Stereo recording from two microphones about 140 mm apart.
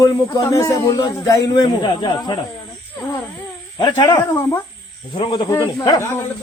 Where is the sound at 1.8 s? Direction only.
35° left (ahead or behind).